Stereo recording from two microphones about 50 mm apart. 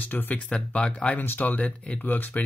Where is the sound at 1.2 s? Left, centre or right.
Left.